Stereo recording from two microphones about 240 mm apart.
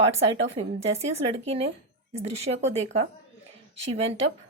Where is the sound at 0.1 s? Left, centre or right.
Right.